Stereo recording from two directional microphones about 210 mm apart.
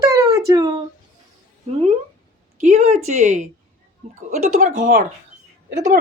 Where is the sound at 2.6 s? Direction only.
35° right (ahead or behind).